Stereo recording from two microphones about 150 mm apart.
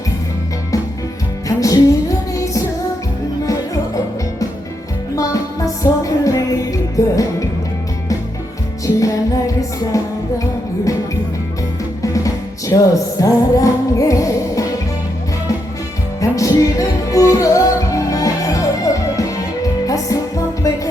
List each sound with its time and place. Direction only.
1.5 s music: 20° left (ahead or behind)
5.1 s music: 20° left (ahead or behind)
9.0 s music: 20° left (ahead or behind)
12.0 s music: 20° left (ahead or behind)
16.2 s music: 20° left (ahead or behind)